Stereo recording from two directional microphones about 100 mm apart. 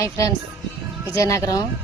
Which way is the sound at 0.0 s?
30° left (ahead or behind).